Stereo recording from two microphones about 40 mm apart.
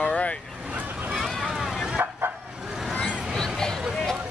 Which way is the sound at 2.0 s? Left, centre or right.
Right.